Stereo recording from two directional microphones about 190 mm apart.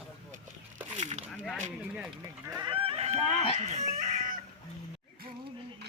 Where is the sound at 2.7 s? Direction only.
30° right (ahead or behind).